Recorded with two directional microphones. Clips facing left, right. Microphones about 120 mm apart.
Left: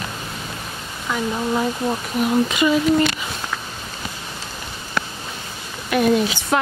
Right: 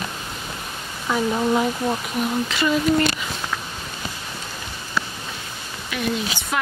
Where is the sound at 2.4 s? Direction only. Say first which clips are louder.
Left 4 dB; 15° left (ahead or behind).